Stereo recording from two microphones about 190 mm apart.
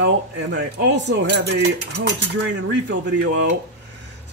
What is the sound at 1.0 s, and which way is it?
Dishes, 60° right (ahead or behind).